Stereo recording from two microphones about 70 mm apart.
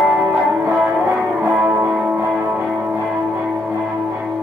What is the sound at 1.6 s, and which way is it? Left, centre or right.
Music, right.